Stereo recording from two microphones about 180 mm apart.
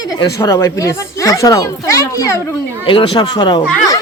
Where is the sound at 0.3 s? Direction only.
15° left (ahead or behind).